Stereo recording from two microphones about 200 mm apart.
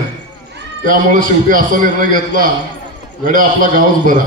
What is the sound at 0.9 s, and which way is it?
A man's voice, 45° right (ahead or behind).